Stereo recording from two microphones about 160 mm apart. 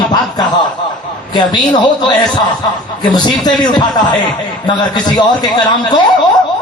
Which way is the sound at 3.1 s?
25° left (ahead or behind).